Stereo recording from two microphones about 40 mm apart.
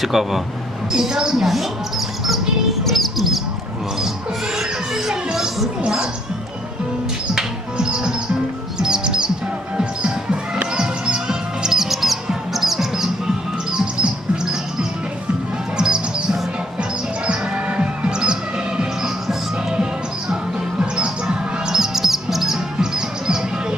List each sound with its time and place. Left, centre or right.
0.0 s a woman's voice: centre
1.5 s speech: centre
2.8 s music: centre
4.5 s a sound: centre
5.1 s music: centre
7.3 s music: right
10.8 s music: centre
17.5 s music: right